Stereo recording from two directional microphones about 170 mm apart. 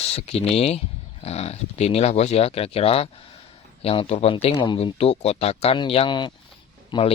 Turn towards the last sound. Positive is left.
turn(degrees=30)  # may be behind; listen again after turning